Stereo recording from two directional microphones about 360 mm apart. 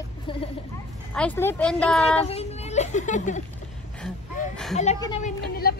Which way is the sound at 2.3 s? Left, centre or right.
Centre.